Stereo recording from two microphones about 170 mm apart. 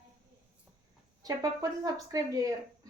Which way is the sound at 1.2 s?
20° right (ahead or behind).